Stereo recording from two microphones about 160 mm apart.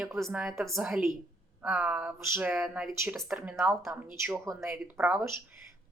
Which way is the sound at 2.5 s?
5° right (ahead or behind).